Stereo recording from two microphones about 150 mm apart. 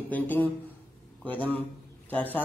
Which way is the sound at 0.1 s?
10° left (ahead or behind).